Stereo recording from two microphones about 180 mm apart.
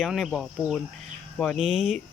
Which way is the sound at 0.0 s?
Centre (ahead or behind).